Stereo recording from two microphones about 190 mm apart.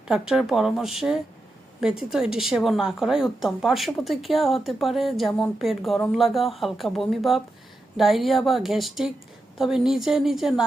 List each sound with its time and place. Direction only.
0.1 s a woman's voice: 5° right (ahead or behind)